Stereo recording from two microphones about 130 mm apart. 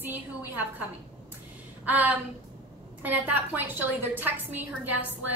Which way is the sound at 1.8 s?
10° right (ahead or behind).